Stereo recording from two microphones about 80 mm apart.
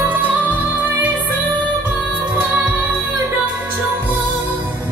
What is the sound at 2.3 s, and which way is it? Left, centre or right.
Music, centre.